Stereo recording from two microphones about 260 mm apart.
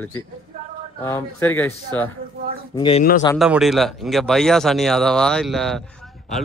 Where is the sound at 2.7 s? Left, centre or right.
Centre.